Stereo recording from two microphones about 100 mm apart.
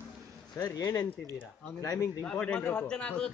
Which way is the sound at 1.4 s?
25° left (ahead or behind).